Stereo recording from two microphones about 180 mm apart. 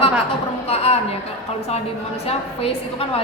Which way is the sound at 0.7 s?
35° left (ahead or behind).